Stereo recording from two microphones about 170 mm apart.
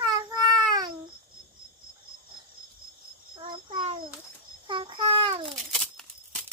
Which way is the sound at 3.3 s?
35° right (ahead or behind).